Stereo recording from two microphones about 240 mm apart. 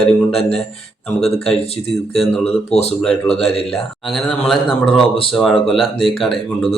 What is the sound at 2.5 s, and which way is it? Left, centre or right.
Speech, left.